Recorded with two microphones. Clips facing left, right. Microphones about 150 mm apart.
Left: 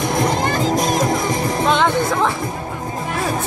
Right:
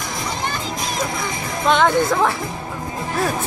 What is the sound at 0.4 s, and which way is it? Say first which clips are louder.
Music: left 8 dB; 40° left (ahead or behind).